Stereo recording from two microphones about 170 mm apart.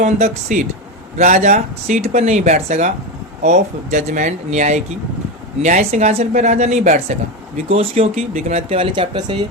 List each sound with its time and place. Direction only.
0.0 s speech: 45° right (ahead or behind); by 9.5 s 25° right (ahead or behind)